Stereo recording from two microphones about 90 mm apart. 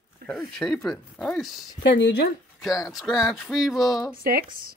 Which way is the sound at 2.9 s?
Centre (ahead or behind).